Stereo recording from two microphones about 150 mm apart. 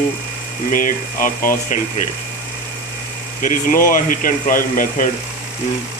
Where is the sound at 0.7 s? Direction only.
65° left (ahead or behind).